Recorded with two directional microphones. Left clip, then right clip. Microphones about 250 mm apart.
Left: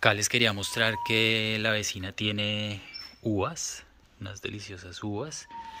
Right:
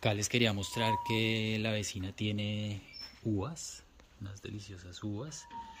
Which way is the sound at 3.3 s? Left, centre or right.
Left.